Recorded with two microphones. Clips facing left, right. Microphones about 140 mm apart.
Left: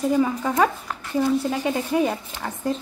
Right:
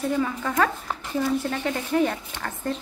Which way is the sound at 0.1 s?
15° left (ahead or behind).